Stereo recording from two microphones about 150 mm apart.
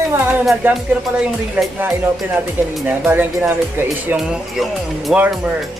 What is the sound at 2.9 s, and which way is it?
Speech, 15° right (ahead or behind).